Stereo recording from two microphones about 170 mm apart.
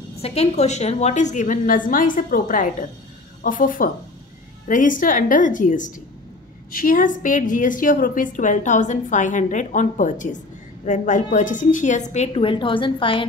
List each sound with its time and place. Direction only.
0.2 s a woman's voice: 40° left (ahead or behind)